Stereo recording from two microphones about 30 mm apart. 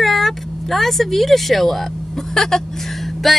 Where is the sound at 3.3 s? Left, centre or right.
Centre.